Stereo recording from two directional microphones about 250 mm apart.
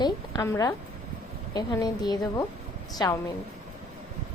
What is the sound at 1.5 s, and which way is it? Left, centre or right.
A woman's voice, centre.